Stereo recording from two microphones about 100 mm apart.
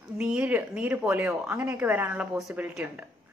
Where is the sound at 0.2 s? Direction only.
10° right (ahead or behind).